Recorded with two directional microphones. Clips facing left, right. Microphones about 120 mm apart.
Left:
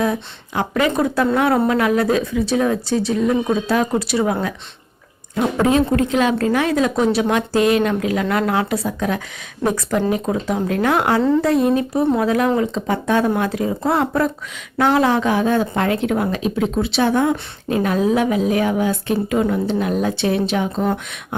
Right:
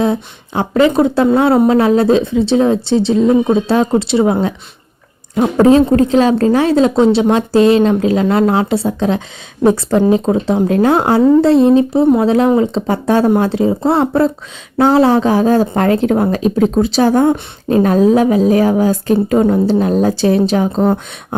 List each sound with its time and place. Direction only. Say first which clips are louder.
0.0 s a woman's voice: right 5 dB; 30° right (ahead or behind)